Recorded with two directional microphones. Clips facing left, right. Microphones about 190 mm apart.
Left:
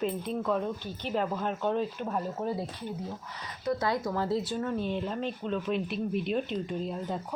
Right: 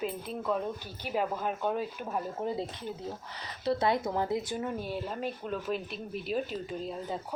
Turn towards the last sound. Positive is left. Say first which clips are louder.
# left 2 dB
turn(degrees=0)  # may be behind; listen again after turning